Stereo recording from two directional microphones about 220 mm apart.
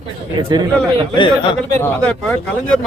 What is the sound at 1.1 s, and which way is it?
Speech, 20° left (ahead or behind).